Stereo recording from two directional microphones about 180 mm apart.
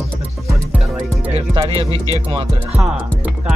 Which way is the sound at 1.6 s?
30° right (ahead or behind).